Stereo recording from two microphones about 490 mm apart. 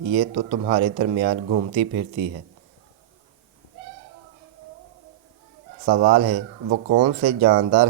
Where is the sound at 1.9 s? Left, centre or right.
Right.